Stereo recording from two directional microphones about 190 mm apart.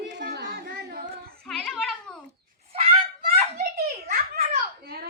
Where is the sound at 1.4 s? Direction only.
5° left (ahead or behind).